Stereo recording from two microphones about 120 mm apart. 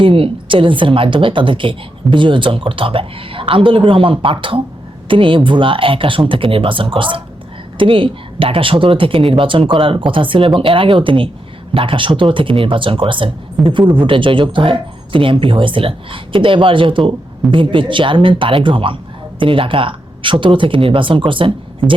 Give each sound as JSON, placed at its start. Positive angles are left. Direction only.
{"t": 0.0, "sound": "speech", "side_deg": -45}